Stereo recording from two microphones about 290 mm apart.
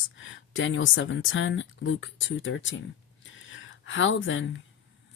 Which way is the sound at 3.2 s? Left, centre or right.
Left.